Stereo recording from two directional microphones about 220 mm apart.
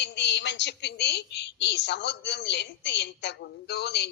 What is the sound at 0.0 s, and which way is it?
A woman's voice, 50° left (ahead or behind).